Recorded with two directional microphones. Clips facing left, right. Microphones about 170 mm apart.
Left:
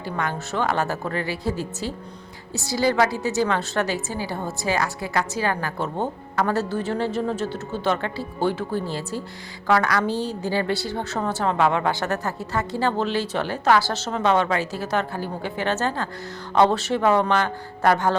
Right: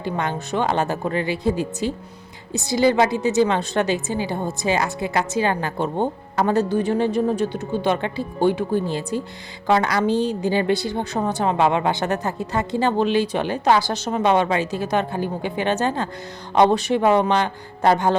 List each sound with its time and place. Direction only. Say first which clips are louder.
0.0 s a woman's voice: right 3 dB; 20° right (ahead or behind)